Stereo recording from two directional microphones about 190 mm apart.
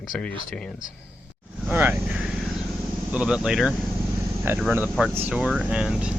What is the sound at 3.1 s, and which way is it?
Speech, 5° right (ahead or behind).